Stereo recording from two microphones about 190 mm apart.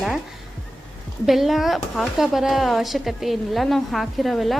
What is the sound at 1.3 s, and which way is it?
Speech, centre (ahead or behind).